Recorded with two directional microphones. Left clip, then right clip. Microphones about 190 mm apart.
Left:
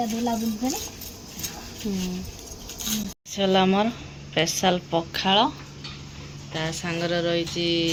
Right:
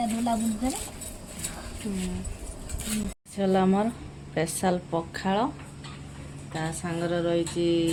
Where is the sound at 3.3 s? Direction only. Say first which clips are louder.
Left 4 dB; centre (ahead or behind).